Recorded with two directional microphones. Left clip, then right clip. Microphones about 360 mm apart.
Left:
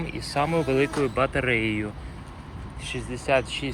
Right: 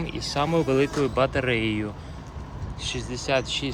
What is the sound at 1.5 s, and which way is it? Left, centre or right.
Speech, right.